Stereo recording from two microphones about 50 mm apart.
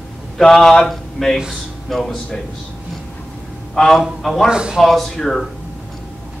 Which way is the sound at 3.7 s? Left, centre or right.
Centre.